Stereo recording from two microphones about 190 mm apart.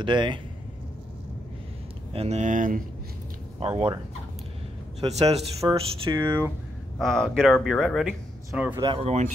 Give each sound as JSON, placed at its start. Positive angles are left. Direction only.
{"t": 0.0, "sound": "speech", "side_deg": -25}
{"t": 2.1, "sound": "speech", "side_deg": -35}
{"t": 3.5, "sound": "speech", "side_deg": -30}
{"t": 5.0, "sound": "speech", "side_deg": -30}
{"t": 5.7, "sound": "speech", "side_deg": -20}
{"t": 7.0, "sound": "speech", "side_deg": 5}
{"t": 8.8, "sound": "speech", "side_deg": -30}